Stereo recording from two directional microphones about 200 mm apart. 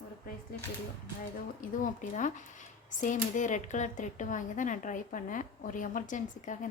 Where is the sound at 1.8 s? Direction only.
40° left (ahead or behind).